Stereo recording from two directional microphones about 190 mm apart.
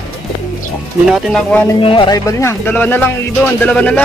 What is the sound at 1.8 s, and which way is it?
Speech, 25° left (ahead or behind).